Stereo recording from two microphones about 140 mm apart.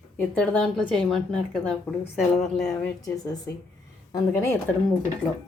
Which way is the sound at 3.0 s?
25° left (ahead or behind).